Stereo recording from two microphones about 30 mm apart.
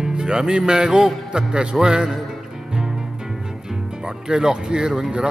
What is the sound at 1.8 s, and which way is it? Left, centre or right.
Music, right.